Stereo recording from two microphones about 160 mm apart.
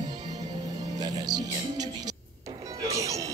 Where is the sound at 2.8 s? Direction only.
20° right (ahead or behind).